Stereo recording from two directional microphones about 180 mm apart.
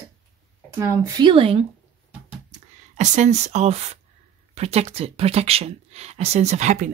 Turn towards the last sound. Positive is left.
turn(degrees=-40)  # may be behind; listen again after turning